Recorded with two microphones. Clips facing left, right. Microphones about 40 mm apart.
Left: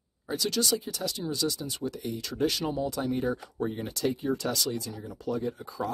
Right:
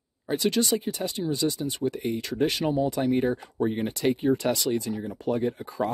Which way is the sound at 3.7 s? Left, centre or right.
Right.